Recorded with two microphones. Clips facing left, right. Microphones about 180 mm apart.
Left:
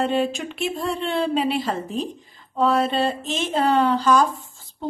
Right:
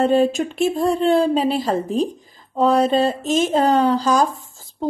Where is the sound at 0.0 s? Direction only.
40° right (ahead or behind).